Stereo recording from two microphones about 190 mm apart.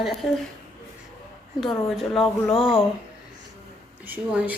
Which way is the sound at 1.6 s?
Centre (ahead or behind).